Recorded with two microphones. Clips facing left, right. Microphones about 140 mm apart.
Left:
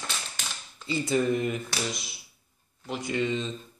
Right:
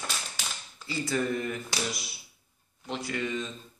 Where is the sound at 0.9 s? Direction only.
20° left (ahead or behind).